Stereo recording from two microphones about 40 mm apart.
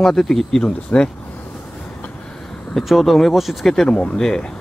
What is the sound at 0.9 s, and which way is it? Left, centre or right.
Speech, left.